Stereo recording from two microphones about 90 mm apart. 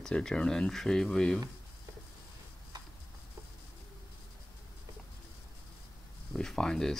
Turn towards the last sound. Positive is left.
turn(degrees=5)  # may be behind; listen again after turning